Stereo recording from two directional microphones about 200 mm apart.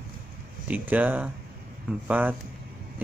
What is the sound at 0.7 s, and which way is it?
Speech, 10° right (ahead or behind).